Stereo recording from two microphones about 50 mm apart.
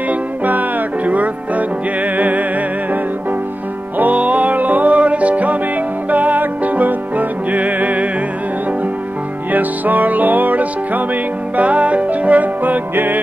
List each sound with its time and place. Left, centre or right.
0.1 s music: right
4.0 s music: right
9.5 s music: right